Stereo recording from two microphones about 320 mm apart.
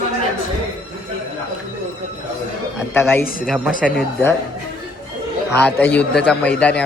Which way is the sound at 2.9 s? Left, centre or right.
Centre.